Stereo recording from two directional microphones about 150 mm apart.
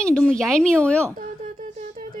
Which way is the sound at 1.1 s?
60° right (ahead or behind).